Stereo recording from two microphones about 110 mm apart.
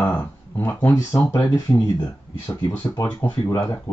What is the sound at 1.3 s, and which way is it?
Speech, 35° left (ahead or behind).